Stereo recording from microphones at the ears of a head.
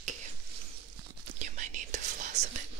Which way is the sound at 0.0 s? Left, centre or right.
Right.